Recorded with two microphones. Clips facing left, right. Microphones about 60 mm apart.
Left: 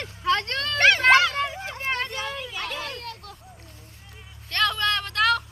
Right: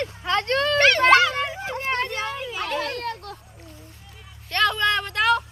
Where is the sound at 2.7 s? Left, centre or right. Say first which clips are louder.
Right 7 dB; right.